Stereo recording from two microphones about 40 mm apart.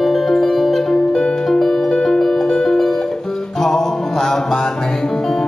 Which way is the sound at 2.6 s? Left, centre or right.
Centre.